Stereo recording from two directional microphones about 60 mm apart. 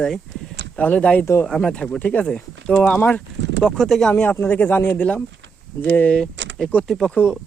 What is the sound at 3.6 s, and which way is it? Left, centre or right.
Speech, centre.